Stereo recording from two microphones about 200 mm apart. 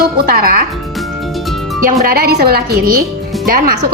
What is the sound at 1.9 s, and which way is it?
A woman's voice, 45° right (ahead or behind).